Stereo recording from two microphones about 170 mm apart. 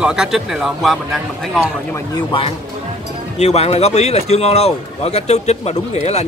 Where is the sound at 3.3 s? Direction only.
40° left (ahead or behind).